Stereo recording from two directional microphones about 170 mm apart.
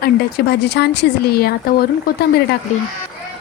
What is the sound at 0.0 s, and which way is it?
Speech, 70° left (ahead or behind).